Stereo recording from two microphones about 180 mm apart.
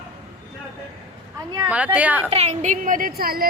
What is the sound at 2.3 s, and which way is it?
A woman's voice, 35° right (ahead or behind).